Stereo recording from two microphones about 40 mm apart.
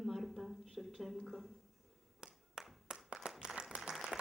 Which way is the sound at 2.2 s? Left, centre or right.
Centre.